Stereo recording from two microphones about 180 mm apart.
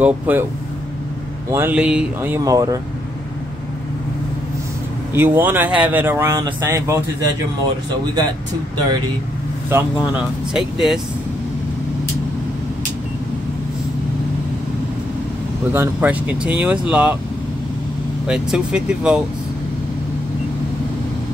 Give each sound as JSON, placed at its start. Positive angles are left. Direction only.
{"t": 0.0, "sound": "speech", "side_deg": -10}
{"t": 1.5, "sound": "speech", "side_deg": -10}
{"t": 5.1, "sound": "speech", "side_deg": -10}
{"t": 9.7, "sound": "speech", "side_deg": -10}
{"t": 15.7, "sound": "speech", "side_deg": -10}
{"t": 18.2, "sound": "speech", "side_deg": -5}